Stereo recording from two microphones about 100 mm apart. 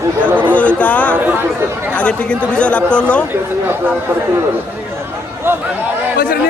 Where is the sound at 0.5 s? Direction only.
15° left (ahead or behind).